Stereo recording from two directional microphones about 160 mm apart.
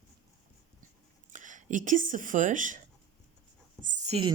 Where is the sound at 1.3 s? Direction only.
50° right (ahead or behind).